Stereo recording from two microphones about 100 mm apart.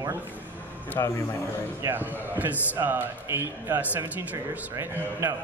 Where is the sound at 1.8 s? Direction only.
20° right (ahead or behind).